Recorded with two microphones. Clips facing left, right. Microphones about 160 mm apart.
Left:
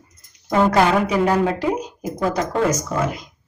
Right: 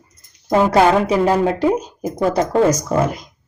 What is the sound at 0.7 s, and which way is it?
A woman's voice, 30° right (ahead or behind).